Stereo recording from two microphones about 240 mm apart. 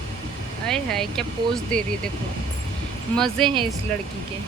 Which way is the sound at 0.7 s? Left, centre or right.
Centre.